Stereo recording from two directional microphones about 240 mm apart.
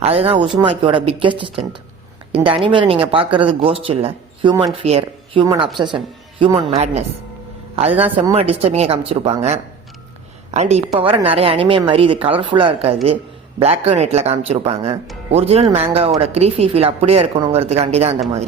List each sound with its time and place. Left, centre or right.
0.0 s a woman's voice: right
8.0 s a woman's voice: right